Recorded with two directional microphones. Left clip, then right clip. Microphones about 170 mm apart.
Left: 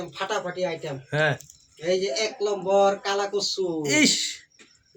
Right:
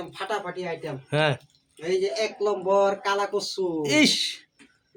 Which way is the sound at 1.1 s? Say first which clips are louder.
Even; 25° right (ahead or behind).